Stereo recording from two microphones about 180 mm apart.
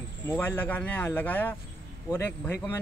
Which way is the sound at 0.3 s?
10° left (ahead or behind).